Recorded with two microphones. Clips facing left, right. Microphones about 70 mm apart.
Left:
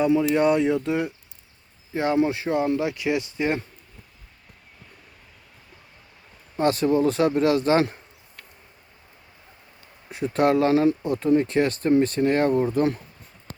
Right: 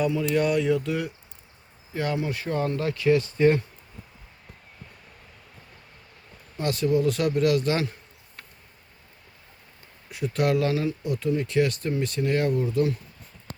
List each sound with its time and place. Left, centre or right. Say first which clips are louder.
0.0 s speech: left 4 dB; left
6.6 s speech: left 4 dB; left
10.1 s speech: left 4 dB; left